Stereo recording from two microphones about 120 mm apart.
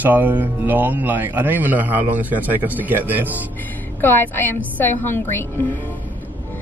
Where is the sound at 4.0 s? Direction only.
15° left (ahead or behind).